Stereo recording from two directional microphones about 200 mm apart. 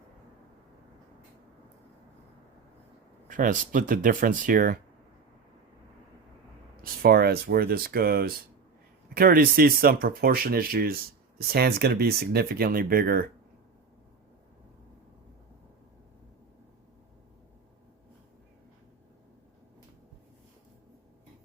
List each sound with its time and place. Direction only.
3.2 s speech: 40° right (ahead or behind)
6.8 s speech: 50° right (ahead or behind)